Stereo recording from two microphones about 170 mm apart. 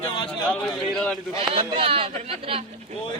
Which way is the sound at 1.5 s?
35° right (ahead or behind).